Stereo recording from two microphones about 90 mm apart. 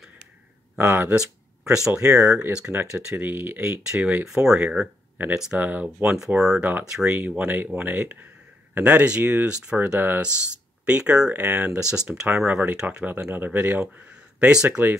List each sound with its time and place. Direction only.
0.7 s speech: 25° right (ahead or behind)
1.1 s a sound: 5° right (ahead or behind)
1.9 s speech: 30° right (ahead or behind)
2.5 s speech: 15° right (ahead or behind)
3.9 s speech: 15° right (ahead or behind)
6.1 s speech: 5° right (ahead or behind)
7.2 s speech: 20° right (ahead or behind)
10.9 s speech: 10° right (ahead or behind)